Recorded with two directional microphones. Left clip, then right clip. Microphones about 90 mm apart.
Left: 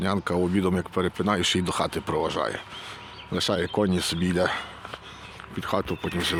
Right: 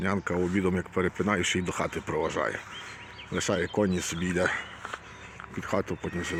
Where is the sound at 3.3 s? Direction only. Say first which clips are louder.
Left 3 dB; 20° left (ahead or behind).